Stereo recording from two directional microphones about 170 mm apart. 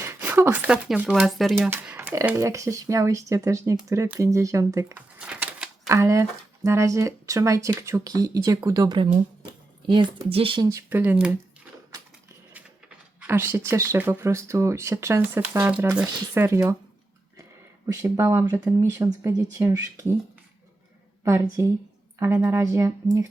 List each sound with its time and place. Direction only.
0.0 s speech: 10° right (ahead or behind); by 10.7 s 30° right (ahead or behind)
10.7 s speech: 15° right (ahead or behind)
13.1 s speech: 10° right (ahead or behind)
17.8 s speech: 15° right (ahead or behind)
21.2 s speech: 15° right (ahead or behind)